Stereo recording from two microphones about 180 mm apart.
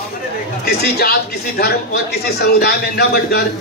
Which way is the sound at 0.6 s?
60° left (ahead or behind).